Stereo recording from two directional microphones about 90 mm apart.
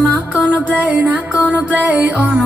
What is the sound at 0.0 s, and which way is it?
Music, 15° right (ahead or behind).